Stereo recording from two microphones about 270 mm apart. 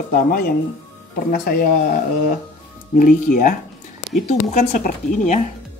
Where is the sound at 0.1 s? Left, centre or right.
Left.